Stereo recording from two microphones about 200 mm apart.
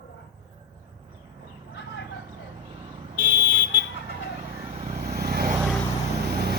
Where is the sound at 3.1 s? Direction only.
45° right (ahead or behind).